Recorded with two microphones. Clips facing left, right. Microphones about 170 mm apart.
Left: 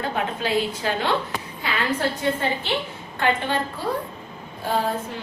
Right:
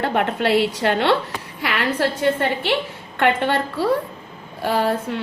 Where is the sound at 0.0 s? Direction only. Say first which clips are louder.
Right 6 dB; 70° right (ahead or behind).